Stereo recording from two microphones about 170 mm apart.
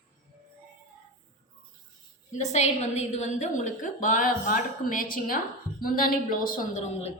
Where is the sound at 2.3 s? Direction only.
45° left (ahead or behind).